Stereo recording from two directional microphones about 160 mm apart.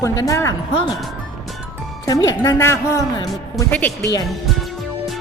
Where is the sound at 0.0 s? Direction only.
20° left (ahead or behind).